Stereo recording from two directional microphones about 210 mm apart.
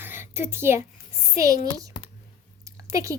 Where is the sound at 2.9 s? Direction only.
15° right (ahead or behind).